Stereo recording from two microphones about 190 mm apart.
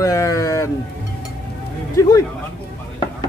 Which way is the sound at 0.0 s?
15° left (ahead or behind).